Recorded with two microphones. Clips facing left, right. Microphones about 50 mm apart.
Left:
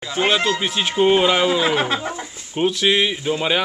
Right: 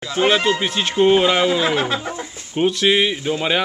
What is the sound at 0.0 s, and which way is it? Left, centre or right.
Speech, centre.